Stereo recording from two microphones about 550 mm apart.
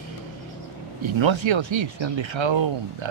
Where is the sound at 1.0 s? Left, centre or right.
Right.